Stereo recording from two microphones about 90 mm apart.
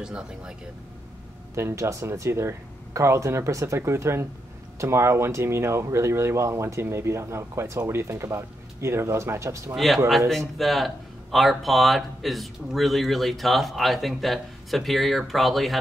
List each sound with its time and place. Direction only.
0.0 s speech: 10° right (ahead or behind)
1.5 s speech: 30° right (ahead or behind)
9.8 s speech: centre (ahead or behind)